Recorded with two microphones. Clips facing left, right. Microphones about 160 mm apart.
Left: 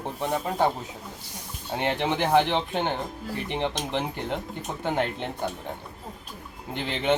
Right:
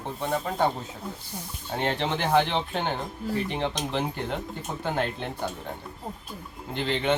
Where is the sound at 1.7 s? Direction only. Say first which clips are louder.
Left 1 dB; 15° left (ahead or behind).